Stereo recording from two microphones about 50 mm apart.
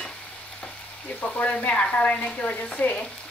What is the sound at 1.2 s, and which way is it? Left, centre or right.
Speech, left.